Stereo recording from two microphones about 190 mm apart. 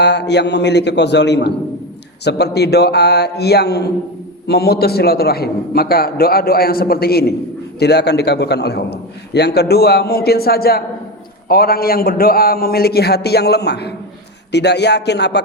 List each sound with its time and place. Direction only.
0.0 s a man's voice: 60° left (ahead or behind)